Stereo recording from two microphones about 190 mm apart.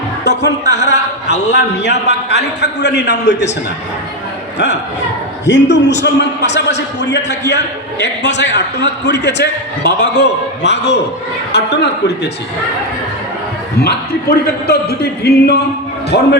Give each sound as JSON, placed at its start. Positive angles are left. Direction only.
{"t": 0.3, "sound": "a man's voice", "side_deg": 65}
{"t": 4.5, "sound": "a man's voice", "side_deg": 65}
{"t": 13.8, "sound": "a man's voice", "side_deg": 55}